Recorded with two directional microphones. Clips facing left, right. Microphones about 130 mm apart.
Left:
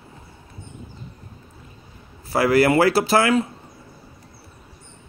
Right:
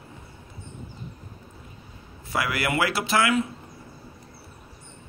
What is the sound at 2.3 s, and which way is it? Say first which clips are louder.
A man's voice: left 10 dB; 35° left (ahead or behind).